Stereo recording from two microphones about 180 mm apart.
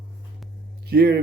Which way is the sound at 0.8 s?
60° right (ahead or behind).